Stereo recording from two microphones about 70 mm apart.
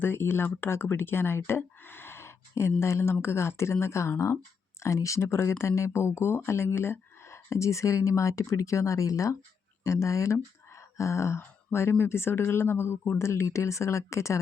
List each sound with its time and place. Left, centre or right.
0.0 s speech: left